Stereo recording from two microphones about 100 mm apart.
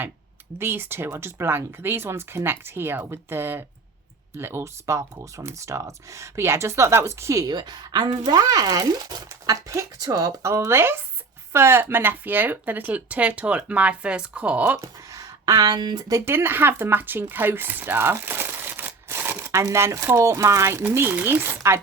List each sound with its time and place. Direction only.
0.6 s speech: 20° right (ahead or behind)
7.4 s a woman's voice: 45° right (ahead or behind)
9.3 s speech: 30° right (ahead or behind); by 14.8 s 15° right (ahead or behind)
14.8 s speech: 35° right (ahead or behind)